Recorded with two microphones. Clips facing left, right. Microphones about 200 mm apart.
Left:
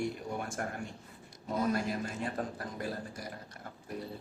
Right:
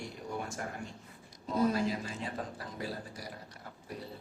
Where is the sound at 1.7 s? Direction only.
55° left (ahead or behind).